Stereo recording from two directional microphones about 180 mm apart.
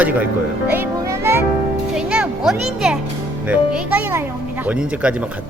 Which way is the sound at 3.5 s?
5° right (ahead or behind).